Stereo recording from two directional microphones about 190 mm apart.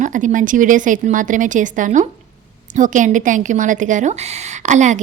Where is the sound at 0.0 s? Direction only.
40° right (ahead or behind).